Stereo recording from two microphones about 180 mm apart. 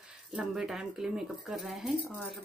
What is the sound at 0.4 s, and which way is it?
Speech, centre (ahead or behind).